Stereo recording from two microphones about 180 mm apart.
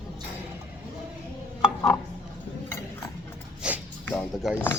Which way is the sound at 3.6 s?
5° right (ahead or behind).